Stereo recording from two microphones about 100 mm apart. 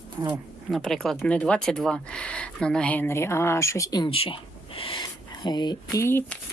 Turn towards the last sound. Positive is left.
turn(degrees=25)  # may be behind; listen again after turning